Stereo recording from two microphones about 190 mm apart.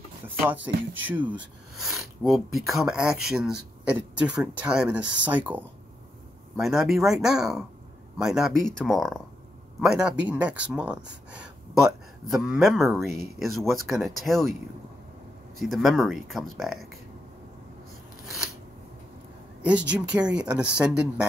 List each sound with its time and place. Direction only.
0.6 s speech: 75° right (ahead or behind)
1.8 s speech: centre (ahead or behind)
15.6 s speech: centre (ahead or behind)
19.9 s speech: 5° right (ahead or behind)